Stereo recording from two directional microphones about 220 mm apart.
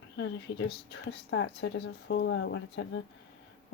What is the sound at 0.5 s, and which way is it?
A woman's voice, 50° left (ahead or behind).